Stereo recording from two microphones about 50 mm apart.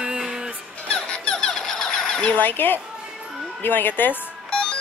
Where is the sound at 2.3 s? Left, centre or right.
Left.